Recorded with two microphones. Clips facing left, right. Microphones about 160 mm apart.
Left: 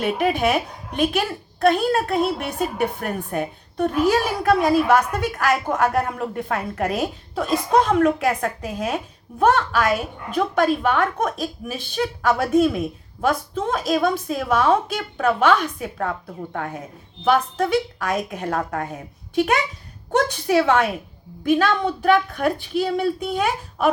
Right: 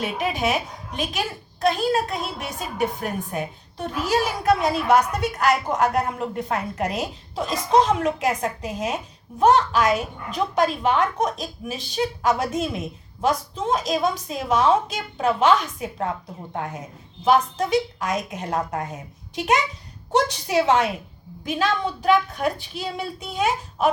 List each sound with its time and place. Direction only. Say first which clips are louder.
0.0 s a woman's voice: left 4 dB; 55° left (ahead or behind)
17.2 s a woman's voice: even; 55° left (ahead or behind)